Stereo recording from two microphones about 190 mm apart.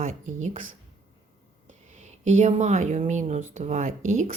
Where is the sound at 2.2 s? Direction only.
40° right (ahead or behind).